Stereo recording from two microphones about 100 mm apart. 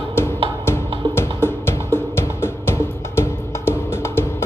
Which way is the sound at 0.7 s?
25° left (ahead or behind).